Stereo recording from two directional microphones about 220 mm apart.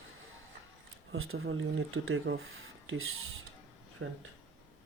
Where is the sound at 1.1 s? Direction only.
70° right (ahead or behind).